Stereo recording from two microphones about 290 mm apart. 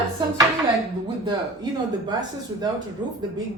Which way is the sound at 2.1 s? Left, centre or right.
Centre.